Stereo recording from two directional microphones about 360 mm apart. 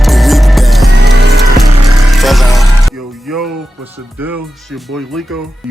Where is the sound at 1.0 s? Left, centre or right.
Right.